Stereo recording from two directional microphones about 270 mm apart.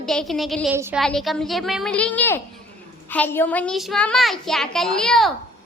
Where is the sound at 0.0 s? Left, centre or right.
Centre.